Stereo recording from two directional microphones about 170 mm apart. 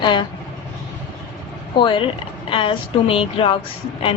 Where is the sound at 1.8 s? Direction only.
30° left (ahead or behind).